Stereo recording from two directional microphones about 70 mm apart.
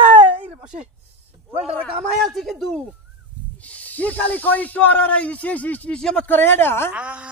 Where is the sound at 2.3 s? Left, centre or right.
Centre.